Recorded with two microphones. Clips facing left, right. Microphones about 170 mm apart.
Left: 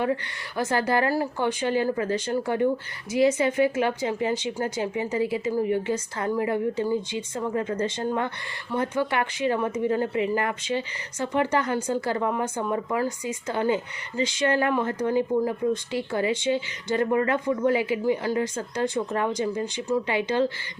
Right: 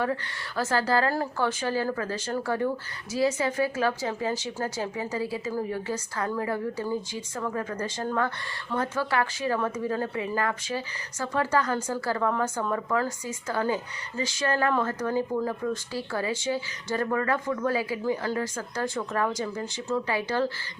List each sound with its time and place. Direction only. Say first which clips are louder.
0.0 s a woman's voice: left 3 dB; 20° left (ahead or behind)